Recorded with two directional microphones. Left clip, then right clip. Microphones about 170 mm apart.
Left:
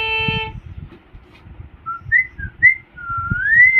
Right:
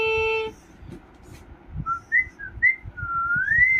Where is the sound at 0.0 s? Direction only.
20° left (ahead or behind).